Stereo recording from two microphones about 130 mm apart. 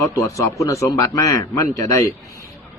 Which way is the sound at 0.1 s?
25° left (ahead or behind).